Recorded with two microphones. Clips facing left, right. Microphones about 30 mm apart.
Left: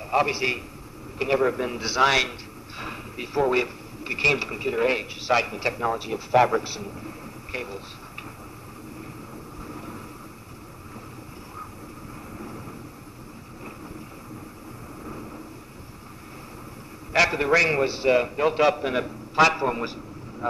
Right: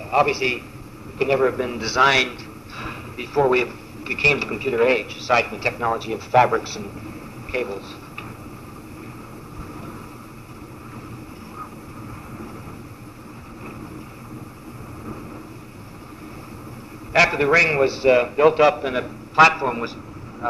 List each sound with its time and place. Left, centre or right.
0.1 s a man's voice: right
17.1 s speech: right
18.1 s a man's voice: right
18.8 s speech: right
19.3 s a man's voice: right